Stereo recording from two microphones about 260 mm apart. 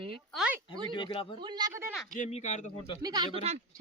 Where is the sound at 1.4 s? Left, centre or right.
Centre.